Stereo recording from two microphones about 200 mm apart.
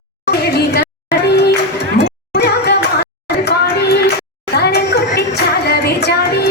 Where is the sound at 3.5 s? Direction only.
55° left (ahead or behind).